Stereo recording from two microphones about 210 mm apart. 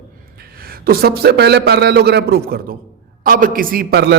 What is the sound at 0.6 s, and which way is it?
A man's voice, 45° right (ahead or behind).